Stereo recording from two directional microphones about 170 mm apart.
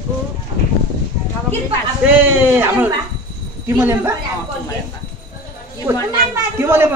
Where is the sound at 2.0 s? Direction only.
10° right (ahead or behind).